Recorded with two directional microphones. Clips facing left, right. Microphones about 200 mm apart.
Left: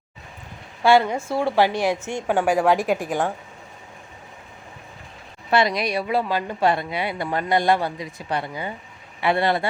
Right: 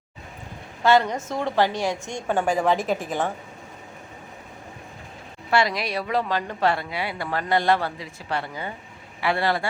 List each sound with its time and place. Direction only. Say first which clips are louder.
0.8 s a woman's voice: left 2 dB; 10° left (ahead or behind)
5.5 s a woman's voice: left 2 dB; 20° left (ahead or behind)